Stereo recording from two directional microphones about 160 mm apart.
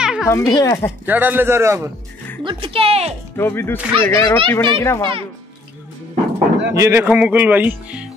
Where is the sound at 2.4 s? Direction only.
30° right (ahead or behind).